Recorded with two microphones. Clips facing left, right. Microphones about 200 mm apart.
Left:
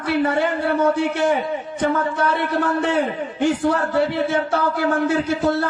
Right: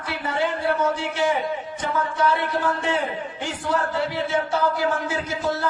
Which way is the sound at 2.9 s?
60° left (ahead or behind).